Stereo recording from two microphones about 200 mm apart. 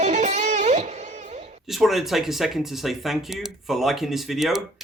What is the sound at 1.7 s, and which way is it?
Speech, centre (ahead or behind).